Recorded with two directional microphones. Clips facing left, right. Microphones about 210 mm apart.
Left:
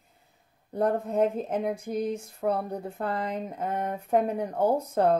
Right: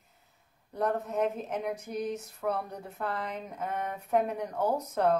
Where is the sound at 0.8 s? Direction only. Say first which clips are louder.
Left 5 dB; 30° left (ahead or behind).